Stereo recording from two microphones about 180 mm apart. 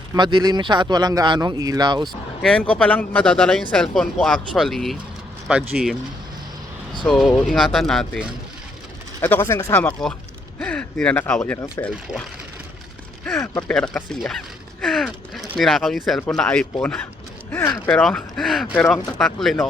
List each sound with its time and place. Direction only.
0.1 s speech: 25° right (ahead or behind)
2.4 s speech: 5° left (ahead or behind)
7.1 s speech: centre (ahead or behind)
13.4 s speech: 10° left (ahead or behind)
17.9 s speech: 5° left (ahead or behind)